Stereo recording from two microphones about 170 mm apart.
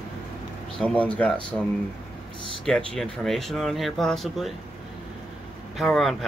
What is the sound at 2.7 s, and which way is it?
Speech, 5° left (ahead or behind).